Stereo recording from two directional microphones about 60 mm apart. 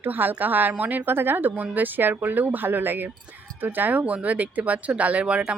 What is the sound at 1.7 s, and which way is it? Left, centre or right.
Speech, right.